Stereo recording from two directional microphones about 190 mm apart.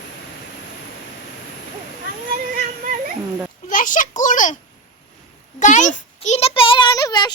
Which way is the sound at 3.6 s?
45° left (ahead or behind).